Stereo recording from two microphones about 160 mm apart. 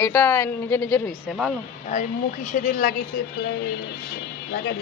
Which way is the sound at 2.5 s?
55° left (ahead or behind).